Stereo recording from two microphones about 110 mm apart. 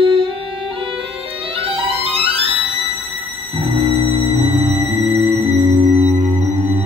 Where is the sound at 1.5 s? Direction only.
55° right (ahead or behind).